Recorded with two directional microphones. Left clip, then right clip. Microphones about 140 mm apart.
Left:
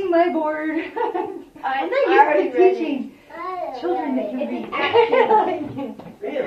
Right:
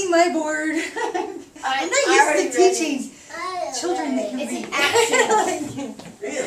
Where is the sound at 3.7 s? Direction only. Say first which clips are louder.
Left 3 dB; 10° right (ahead or behind).